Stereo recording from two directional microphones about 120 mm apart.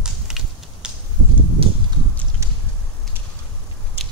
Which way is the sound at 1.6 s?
50° right (ahead or behind).